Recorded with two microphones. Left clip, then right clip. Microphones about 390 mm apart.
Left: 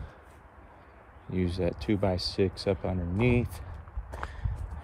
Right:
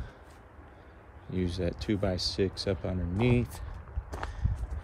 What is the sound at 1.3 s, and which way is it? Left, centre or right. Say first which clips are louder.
Speech: left 3 dB; centre.